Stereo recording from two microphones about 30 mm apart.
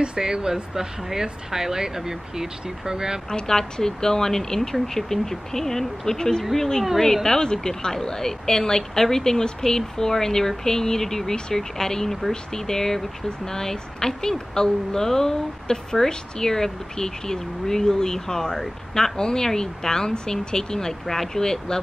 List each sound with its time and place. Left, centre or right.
0.2 s speech: right
3.3 s speech: centre